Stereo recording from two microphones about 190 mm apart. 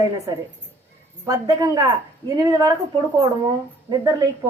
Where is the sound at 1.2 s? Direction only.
20° right (ahead or behind).